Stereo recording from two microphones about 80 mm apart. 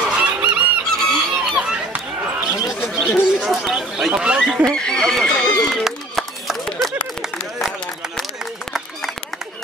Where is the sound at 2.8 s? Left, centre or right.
Left.